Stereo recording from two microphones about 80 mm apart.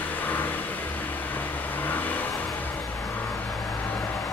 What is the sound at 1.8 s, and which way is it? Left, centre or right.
Vehicle, left.